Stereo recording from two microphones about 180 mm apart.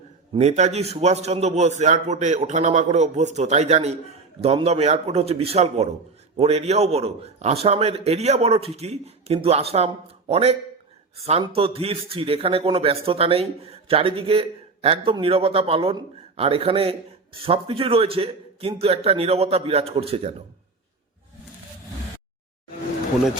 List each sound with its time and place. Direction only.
0.3 s a man's voice: 40° right (ahead or behind)